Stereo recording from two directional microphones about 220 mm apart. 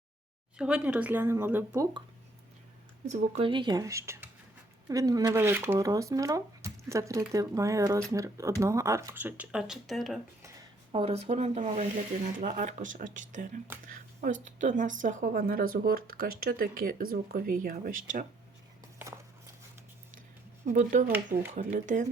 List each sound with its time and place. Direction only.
0.6 s speech: 5° right (ahead or behind)
3.1 s speech: 25° right (ahead or behind); by 10.2 s centre (ahead or behind)
10.9 s speech: 25° right (ahead or behind)
13.8 s a sound: 40° right (ahead or behind)
14.4 s speech: 35° right (ahead or behind)
20.7 s speech: 35° right (ahead or behind)